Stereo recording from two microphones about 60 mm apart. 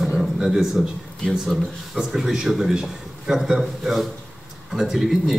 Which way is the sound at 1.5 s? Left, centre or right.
Centre.